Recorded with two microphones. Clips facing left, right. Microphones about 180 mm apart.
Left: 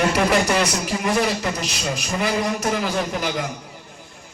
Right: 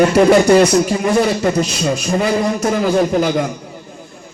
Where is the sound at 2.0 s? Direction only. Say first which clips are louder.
Right 5 dB; 30° right (ahead or behind).